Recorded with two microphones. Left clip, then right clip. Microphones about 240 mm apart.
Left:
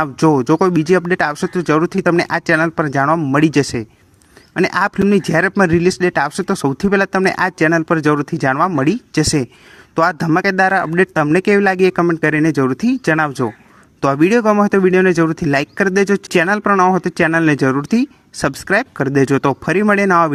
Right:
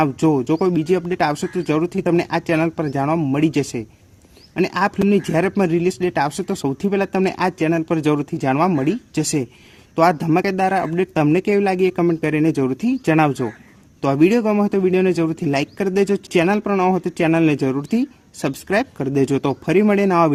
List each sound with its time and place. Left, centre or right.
0.0 s speech: left